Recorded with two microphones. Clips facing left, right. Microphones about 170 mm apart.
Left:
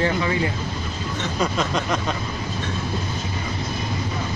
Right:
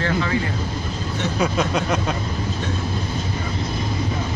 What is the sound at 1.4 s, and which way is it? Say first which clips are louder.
Speech: right 2 dB; 5° right (ahead or behind).